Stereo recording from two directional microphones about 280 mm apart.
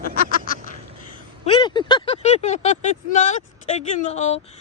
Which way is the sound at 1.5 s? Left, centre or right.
Centre.